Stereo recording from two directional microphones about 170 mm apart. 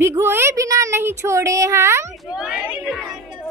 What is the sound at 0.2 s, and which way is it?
A child's voice, 15° right (ahead or behind).